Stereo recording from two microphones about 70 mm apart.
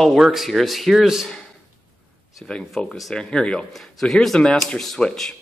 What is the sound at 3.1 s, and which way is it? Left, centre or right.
A man's voice, centre.